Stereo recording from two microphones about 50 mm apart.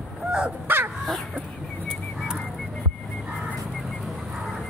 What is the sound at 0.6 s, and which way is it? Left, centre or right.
Crow, right.